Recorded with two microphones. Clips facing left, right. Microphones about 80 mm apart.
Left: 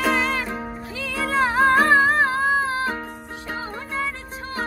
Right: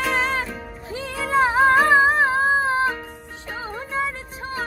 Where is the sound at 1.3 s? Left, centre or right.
Centre.